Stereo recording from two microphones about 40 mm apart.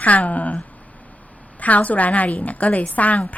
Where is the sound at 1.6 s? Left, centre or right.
Left.